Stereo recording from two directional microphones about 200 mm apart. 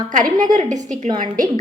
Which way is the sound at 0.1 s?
40° right (ahead or behind).